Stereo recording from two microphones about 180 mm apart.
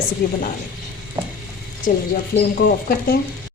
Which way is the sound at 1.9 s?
50° left (ahead or behind).